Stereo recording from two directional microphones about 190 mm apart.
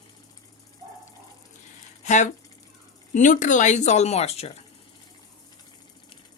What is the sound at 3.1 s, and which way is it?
Speech, 40° left (ahead or behind).